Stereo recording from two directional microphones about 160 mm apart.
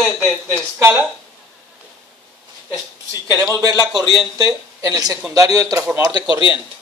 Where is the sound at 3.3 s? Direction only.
20° right (ahead or behind).